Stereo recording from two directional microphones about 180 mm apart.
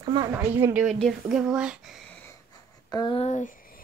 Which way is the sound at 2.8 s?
25° left (ahead or behind).